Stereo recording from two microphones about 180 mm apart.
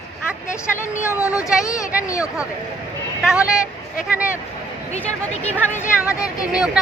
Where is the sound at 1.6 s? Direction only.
15° left (ahead or behind).